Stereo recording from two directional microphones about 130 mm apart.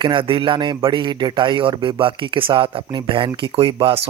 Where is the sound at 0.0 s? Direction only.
40° right (ahead or behind).